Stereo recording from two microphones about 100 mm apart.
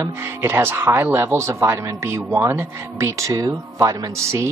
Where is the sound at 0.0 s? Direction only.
25° right (ahead or behind).